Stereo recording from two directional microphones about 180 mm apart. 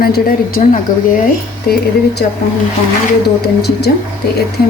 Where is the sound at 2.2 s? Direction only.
55° left (ahead or behind).